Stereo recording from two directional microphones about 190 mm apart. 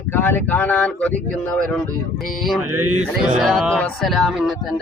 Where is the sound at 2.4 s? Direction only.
5° right (ahead or behind).